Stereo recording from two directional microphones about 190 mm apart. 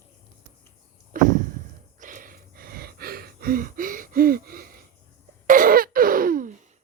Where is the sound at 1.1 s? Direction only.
45° right (ahead or behind).